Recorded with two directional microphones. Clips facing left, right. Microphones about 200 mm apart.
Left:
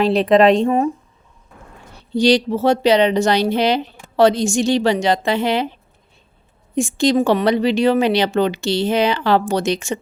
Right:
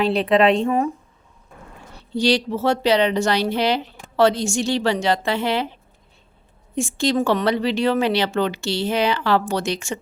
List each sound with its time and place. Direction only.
0.0 s speech: 40° left (ahead or behind)
2.1 s speech: 15° left (ahead or behind)
6.7 s speech: 15° left (ahead or behind)